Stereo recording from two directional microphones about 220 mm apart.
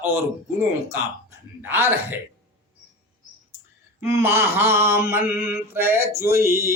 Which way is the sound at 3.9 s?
10° right (ahead or behind).